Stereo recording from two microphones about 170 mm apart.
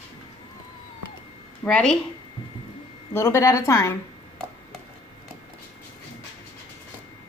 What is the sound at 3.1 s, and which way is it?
Speech, 15° left (ahead or behind).